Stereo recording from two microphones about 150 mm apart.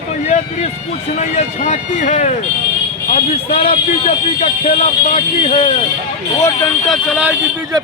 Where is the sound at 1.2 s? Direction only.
50° left (ahead or behind).